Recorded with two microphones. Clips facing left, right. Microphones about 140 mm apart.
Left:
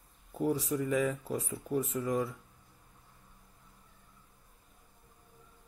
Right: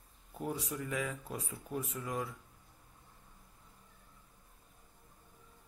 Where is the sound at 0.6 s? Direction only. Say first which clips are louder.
Left 8 dB; centre (ahead or behind).